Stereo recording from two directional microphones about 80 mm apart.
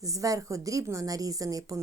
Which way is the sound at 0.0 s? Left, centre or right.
Right.